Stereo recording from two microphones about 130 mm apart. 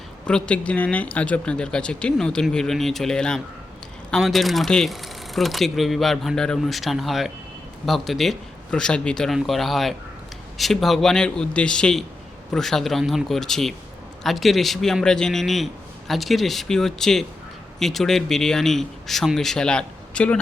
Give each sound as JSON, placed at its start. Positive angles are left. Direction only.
{"t": 0.3, "sound": "speech", "side_deg": 5}